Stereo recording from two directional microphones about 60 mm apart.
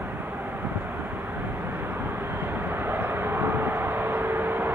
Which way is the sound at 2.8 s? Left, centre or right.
Right.